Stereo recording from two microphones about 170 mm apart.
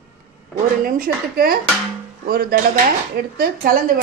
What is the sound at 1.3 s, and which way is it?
Speech, 60° right (ahead or behind).